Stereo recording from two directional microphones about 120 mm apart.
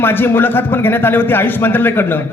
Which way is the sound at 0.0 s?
15° left (ahead or behind).